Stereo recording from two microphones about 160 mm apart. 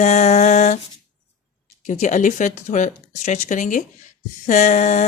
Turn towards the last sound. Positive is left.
turn(degrees=45)  # may be behind; listen again after turning